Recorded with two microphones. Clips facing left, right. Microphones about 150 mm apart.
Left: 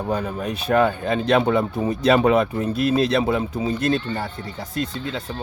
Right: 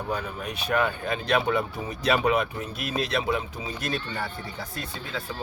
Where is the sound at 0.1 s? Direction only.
30° left (ahead or behind).